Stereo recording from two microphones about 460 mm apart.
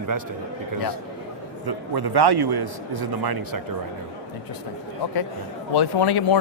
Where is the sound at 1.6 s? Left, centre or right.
Right.